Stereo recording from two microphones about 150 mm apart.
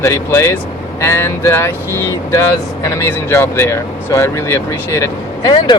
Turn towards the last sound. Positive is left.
turn(degrees=20)  # may be behind; listen again after turning